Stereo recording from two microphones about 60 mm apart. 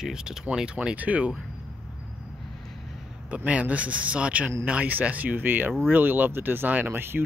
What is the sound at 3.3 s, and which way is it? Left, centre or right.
Speech, right.